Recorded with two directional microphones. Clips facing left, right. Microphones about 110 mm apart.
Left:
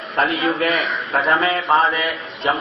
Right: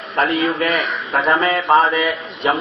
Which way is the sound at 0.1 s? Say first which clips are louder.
Right 2 dB; 10° left (ahead or behind).